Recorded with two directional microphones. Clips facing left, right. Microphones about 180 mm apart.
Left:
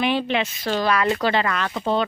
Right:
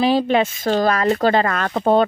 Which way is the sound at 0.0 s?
40° right (ahead or behind).